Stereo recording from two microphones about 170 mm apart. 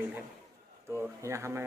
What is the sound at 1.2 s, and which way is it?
Speech, 15° right (ahead or behind).